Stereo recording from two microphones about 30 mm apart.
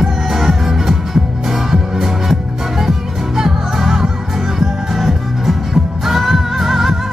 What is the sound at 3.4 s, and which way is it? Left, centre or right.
Music, centre.